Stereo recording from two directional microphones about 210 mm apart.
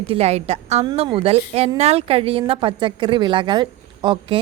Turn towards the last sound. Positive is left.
turn(degrees=-25)  # may be behind; listen again after turning